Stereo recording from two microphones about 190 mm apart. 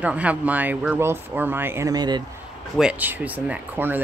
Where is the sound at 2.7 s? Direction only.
5° right (ahead or behind).